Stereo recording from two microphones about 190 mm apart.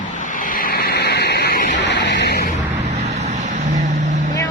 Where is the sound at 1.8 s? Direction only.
65° left (ahead or behind).